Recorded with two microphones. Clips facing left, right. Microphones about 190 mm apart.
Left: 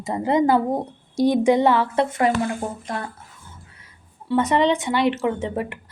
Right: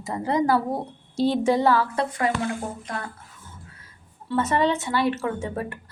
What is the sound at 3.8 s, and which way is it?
A woman's voice, 15° left (ahead or behind).